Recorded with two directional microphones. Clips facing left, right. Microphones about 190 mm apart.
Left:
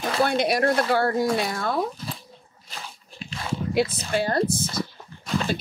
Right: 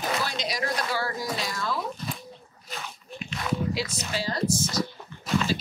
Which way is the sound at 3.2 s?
30° left (ahead or behind).